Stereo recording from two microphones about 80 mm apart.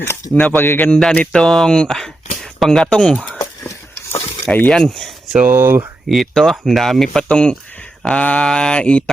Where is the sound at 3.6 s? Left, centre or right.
Left.